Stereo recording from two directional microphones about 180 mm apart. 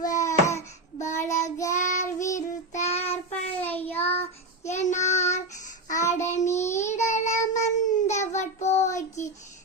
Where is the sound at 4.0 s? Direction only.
35° left (ahead or behind).